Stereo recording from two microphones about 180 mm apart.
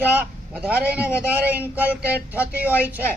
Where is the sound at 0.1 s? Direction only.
10° right (ahead or behind).